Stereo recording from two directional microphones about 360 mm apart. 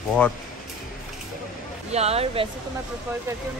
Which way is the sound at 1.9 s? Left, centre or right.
Centre.